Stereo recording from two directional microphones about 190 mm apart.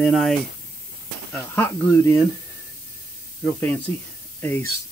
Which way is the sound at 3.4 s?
10° left (ahead or behind).